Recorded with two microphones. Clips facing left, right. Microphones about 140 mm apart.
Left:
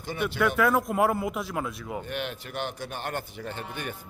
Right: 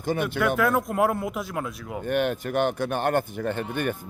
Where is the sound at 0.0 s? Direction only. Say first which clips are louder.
Right 5 dB; 50° right (ahead or behind).